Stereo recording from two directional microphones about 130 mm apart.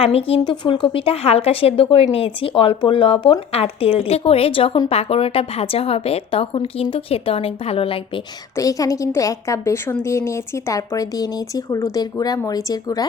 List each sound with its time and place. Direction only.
0.0 s a woman's voice: 50° left (ahead or behind)
8.5 s a woman's voice: 25° left (ahead or behind)